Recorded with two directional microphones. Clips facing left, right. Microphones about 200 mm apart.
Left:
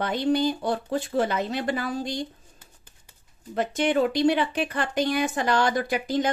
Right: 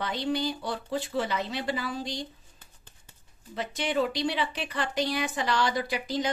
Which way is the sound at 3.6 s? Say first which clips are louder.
Left 6 dB; 50° left (ahead or behind).